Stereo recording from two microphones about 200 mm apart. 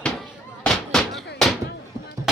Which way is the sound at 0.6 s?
Centre (ahead or behind).